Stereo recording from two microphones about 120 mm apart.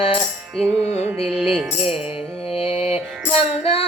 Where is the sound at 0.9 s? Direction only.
60° left (ahead or behind).